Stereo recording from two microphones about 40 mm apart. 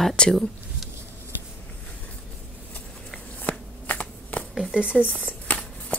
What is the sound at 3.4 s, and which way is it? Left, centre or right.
Shuffling cards, left.